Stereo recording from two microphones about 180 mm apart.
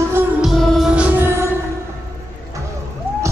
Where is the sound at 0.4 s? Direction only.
Centre (ahead or behind).